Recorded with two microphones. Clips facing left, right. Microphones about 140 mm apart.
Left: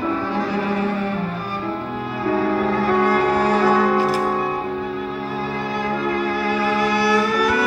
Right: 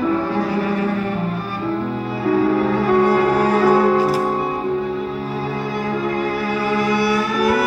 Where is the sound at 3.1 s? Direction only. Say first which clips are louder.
Right 2 dB; 10° right (ahead or behind).